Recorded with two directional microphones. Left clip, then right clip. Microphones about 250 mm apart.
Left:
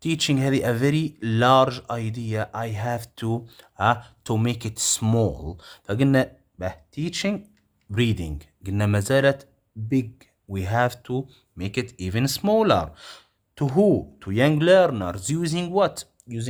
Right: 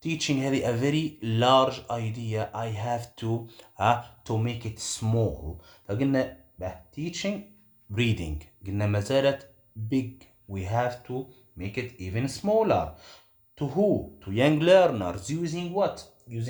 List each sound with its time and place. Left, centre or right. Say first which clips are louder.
0.0 s speech: left 5 dB; left